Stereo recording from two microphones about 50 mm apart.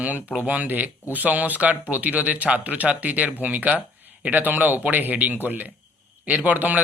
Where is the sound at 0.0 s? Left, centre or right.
Right.